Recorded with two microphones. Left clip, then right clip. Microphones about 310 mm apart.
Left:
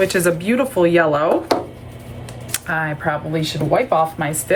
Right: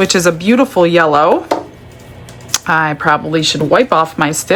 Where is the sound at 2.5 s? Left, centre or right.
Centre.